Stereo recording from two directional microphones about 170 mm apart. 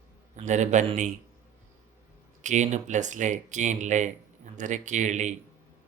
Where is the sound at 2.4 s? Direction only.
45° right (ahead or behind).